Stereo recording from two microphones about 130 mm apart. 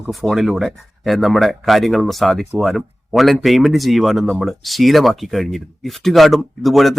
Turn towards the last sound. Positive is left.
turn(degrees=0)  # may be behind; listen again after turning